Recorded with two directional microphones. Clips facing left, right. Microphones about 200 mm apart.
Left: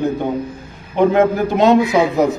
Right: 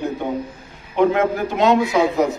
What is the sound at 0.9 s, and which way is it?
Speech, 35° left (ahead or behind).